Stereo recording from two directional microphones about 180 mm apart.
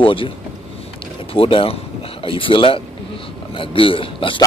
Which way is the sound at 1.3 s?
30° left (ahead or behind).